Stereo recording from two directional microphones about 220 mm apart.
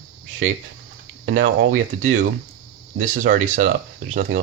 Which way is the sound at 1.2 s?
35° right (ahead or behind).